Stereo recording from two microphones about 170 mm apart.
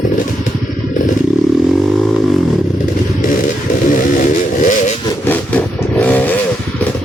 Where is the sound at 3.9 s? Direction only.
50° left (ahead or behind).